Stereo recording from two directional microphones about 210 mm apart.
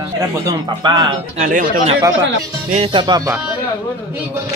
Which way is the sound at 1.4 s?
40° right (ahead or behind).